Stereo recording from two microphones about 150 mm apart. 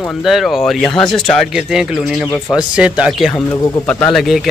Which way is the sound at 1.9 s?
15° left (ahead or behind).